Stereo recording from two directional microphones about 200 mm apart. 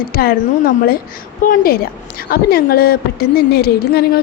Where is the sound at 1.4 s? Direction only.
50° left (ahead or behind).